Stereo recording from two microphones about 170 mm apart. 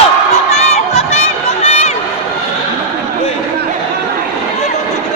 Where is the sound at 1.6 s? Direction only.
40° left (ahead or behind).